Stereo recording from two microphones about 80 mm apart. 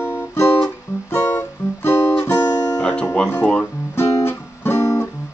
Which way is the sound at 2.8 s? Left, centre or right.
Centre.